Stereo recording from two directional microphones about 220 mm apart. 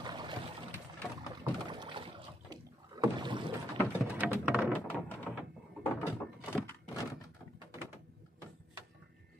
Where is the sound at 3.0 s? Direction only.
20° right (ahead or behind).